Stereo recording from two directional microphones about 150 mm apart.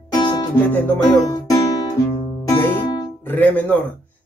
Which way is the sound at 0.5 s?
10° left (ahead or behind).